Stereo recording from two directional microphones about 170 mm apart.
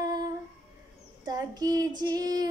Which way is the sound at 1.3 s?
20° right (ahead or behind).